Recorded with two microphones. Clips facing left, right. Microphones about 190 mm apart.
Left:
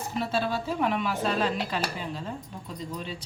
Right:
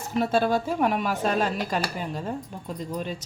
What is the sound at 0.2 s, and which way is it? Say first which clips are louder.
Speech: right 6 dB; 50° right (ahead or behind).